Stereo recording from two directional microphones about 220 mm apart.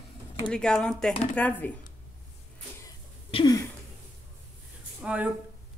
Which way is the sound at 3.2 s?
20° left (ahead or behind).